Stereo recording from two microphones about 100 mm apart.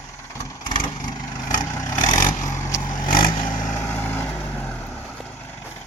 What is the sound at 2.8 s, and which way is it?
Vehicle, 55° left (ahead or behind).